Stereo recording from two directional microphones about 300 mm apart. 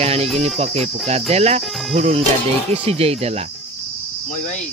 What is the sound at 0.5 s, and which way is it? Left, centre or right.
Speech, right.